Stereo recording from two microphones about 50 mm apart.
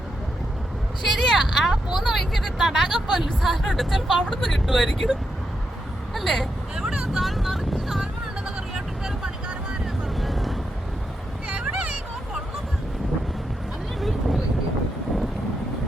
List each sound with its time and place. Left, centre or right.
1.1 s a sound: centre
2.1 s speech: centre
6.1 s speech: centre
7.1 s vehicle: centre
10.2 s vehicle: centre
11.4 s a sound: centre
14.0 s vehicle: centre